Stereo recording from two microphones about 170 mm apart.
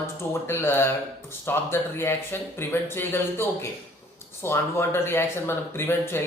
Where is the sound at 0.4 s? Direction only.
15° left (ahead or behind).